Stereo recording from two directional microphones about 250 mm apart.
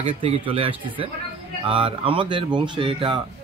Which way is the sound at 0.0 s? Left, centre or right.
Right.